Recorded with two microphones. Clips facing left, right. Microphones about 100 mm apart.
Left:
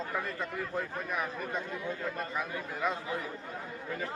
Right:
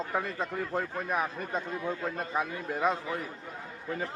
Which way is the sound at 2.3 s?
30° right (ahead or behind).